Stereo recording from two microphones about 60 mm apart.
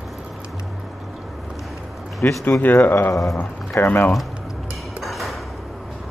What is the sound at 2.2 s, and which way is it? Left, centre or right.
Speech, left.